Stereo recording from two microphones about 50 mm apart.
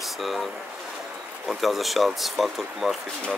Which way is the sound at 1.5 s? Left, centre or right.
Centre.